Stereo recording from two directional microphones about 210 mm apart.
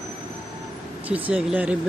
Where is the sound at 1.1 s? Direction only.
5° right (ahead or behind).